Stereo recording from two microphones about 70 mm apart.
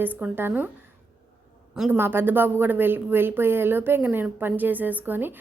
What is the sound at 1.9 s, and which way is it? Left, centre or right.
A woman's voice, right.